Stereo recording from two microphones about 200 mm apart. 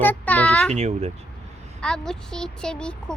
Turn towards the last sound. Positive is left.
turn(degrees=5)  # may be behind; listen again after turning